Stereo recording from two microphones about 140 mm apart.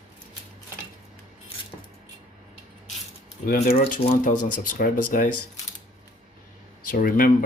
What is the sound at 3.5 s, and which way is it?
Speech, 90° left.